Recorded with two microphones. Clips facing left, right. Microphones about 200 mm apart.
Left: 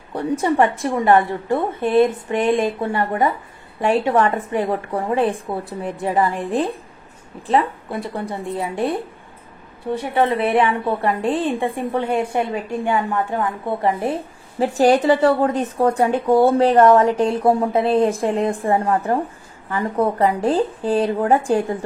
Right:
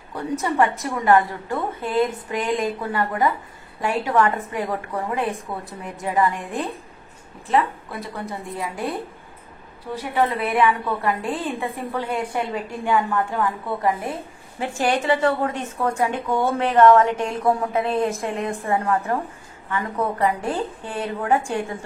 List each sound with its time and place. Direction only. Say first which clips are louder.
0.1 s a woman's voice: left 5 dB; 30° left (ahead or behind)
10.1 s a woman's voice: left 4 dB; 30° left (ahead or behind)